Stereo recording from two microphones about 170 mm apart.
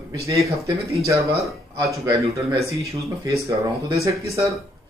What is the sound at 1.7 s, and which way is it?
A man's voice, 20° right (ahead or behind).